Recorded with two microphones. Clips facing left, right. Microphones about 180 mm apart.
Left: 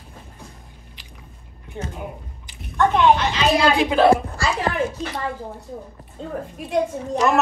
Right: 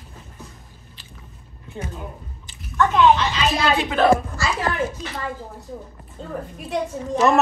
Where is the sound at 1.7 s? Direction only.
20° left (ahead or behind).